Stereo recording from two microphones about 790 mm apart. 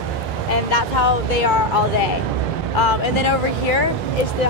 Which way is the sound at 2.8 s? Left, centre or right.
Left.